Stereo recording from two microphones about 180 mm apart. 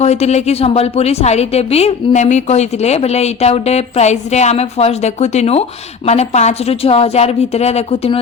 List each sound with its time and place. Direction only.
0.0 s a woman's voice: 35° left (ahead or behind)